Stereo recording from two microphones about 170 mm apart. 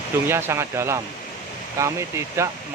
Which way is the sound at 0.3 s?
15° right (ahead or behind).